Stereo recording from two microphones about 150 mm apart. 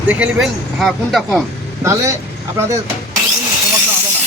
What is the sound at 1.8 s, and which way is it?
Speech, 20° right (ahead or behind).